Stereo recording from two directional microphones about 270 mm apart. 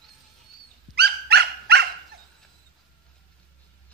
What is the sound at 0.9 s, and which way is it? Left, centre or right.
Dog, right.